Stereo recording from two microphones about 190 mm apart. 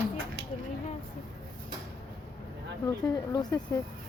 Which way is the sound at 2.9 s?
20° left (ahead or behind).